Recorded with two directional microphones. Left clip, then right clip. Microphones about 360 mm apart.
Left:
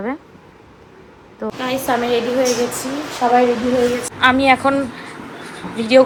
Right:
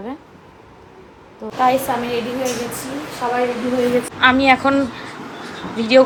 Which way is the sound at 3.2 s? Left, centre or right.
Left.